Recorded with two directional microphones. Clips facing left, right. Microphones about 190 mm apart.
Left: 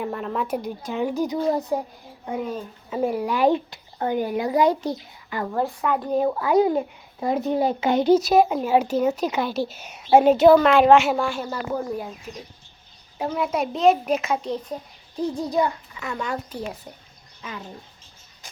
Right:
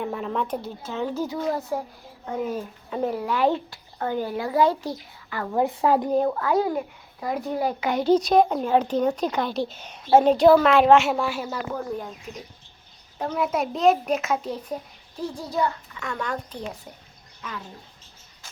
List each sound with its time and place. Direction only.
0.0 s a woman's voice: centre (ahead or behind); by 1.8 s 20° left (ahead or behind)
2.4 s a woman's voice: 10° right (ahead or behind)
2.9 s a woman's voice: 10° left (ahead or behind)
5.6 s a woman's voice: 25° right (ahead or behind)
6.1 s a child's voice: 5° left (ahead or behind); by 8.1 s 25° left (ahead or behind)
8.1 s a woman's voice: 5° left (ahead or behind)
10.3 s a woman's voice: centre (ahead or behind)
11.7 s a woman's voice: 10° left (ahead or behind)
13.1 s a child's voice: 10° left (ahead or behind)
15.2 s a woman's voice: 20° left (ahead or behind)